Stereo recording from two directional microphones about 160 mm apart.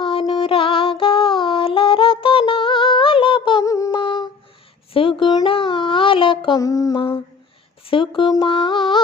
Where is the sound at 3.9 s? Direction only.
30° left (ahead or behind).